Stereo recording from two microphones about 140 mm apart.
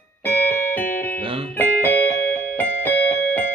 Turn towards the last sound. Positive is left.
turn(degrees=15)  # may be behind; listen again after turning